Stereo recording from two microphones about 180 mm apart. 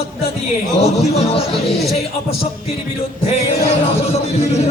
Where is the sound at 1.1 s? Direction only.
35° left (ahead or behind).